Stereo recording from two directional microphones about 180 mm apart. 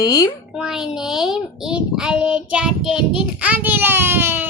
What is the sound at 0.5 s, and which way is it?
A child's voice, 5° right (ahead or behind).